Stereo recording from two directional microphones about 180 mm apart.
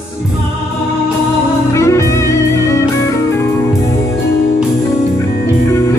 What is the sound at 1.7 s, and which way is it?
Music, 15° left (ahead or behind).